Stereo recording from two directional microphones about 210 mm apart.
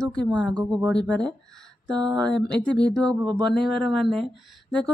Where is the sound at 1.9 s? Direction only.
20° right (ahead or behind).